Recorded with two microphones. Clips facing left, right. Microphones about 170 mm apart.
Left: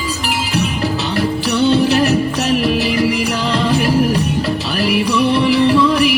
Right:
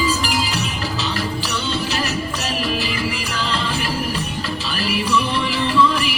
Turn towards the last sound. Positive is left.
turn(degrees=65)  # may be behind; listen again after turning